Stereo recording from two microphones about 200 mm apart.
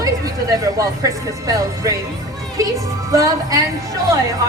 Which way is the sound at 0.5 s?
15° right (ahead or behind).